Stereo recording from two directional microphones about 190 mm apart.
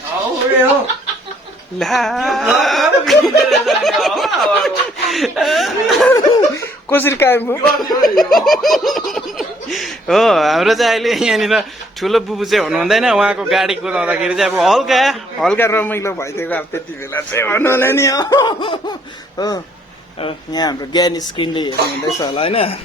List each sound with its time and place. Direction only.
1.8 s laughter: centre (ahead or behind)
6.1 s speech: 15° left (ahead or behind)
8.0 s laughter: centre (ahead or behind); by 18.9 s 25° left (ahead or behind)
20.2 s speech: 20° left (ahead or behind)